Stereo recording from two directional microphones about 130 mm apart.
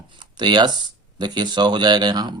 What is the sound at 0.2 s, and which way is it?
Speech, 35° right (ahead or behind).